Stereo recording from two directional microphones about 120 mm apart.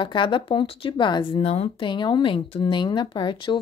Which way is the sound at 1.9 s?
40° left (ahead or behind).